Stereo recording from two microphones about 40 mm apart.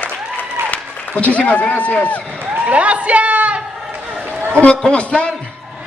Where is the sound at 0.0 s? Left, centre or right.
Left.